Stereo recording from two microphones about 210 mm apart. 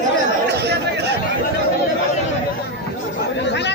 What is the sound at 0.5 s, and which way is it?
Chatter, 50° right (ahead or behind).